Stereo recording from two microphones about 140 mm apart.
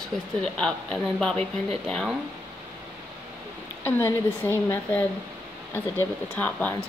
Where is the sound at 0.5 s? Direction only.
5° left (ahead or behind).